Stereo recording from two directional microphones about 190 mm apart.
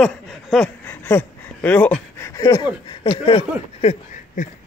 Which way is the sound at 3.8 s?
35° left (ahead or behind).